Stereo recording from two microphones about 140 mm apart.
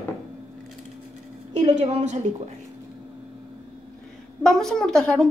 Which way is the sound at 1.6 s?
55° right (ahead or behind).